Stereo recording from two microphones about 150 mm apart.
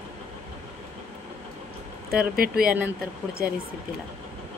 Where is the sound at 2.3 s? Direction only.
80° right.